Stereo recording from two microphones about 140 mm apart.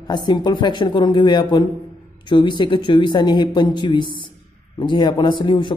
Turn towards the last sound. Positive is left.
turn(degrees=35)  # may be behind; listen again after turning